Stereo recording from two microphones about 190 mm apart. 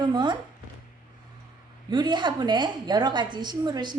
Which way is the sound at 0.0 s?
25° right (ahead or behind).